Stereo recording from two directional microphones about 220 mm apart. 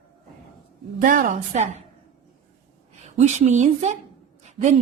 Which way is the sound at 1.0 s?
35° right (ahead or behind).